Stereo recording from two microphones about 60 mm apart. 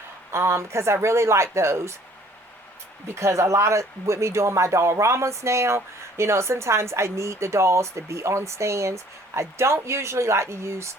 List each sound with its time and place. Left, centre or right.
0.3 s speech: right
3.1 s speech: right